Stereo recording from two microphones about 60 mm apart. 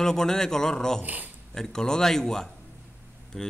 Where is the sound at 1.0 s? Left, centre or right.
Right.